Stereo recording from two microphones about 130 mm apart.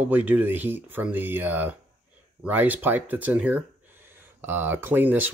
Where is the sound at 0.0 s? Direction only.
15° right (ahead or behind).